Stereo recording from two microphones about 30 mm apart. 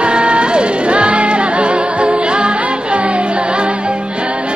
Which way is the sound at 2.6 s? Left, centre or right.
Right.